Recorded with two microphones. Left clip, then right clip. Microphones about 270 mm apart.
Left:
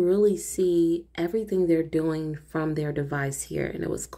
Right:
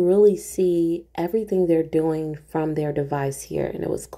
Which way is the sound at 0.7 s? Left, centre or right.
Right.